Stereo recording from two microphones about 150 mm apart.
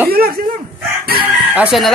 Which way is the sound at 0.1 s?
90° right.